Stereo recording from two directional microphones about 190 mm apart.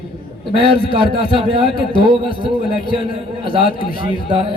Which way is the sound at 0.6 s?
30° left (ahead or behind).